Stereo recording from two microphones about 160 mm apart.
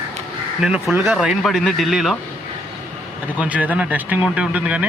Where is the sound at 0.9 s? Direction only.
15° right (ahead or behind).